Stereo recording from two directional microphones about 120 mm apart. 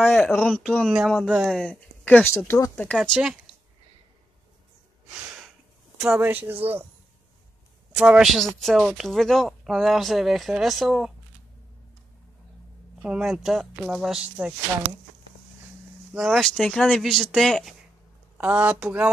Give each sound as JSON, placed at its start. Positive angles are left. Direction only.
{"t": 0.1, "sound": "a woman's voice", "side_deg": 5}
{"t": 1.5, "sound": "speech", "side_deg": 5}
{"t": 3.0, "sound": "a woman's voice", "side_deg": -5}
{"t": 5.9, "sound": "speech", "side_deg": -10}
{"t": 7.9, "sound": "a woman's voice", "side_deg": -5}
{"t": 13.0, "sound": "a woman's voice", "side_deg": -5}
{"t": 16.2, "sound": "a woman's voice", "side_deg": 0}
{"t": 18.4, "sound": "speech", "side_deg": -15}